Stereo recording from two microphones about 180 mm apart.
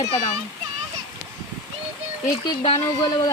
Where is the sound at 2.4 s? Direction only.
30° left (ahead or behind).